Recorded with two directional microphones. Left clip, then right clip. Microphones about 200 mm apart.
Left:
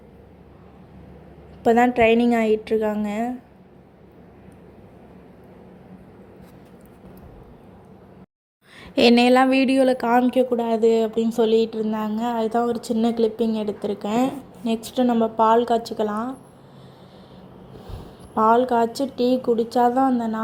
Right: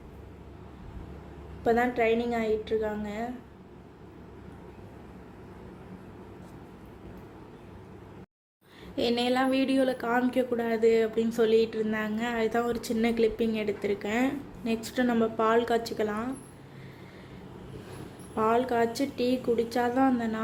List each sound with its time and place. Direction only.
1.6 s a woman's voice: 40° left (ahead or behind)
9.0 s a woman's voice: 45° left (ahead or behind); by 16.0 s 15° left (ahead or behind)
18.4 s a woman's voice: 20° left (ahead or behind)